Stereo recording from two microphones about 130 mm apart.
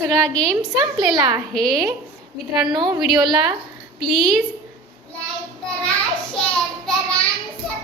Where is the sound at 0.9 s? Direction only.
35° right (ahead or behind).